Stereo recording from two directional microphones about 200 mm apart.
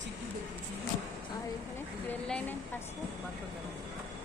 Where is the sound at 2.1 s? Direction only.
10° left (ahead or behind).